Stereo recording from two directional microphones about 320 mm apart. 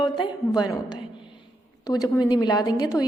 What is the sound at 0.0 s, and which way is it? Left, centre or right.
A woman's voice, centre.